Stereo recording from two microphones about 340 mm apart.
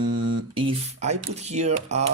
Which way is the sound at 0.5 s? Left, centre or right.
Centre.